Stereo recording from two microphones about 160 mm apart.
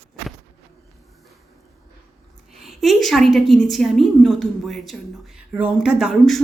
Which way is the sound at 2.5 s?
Centre (ahead or behind).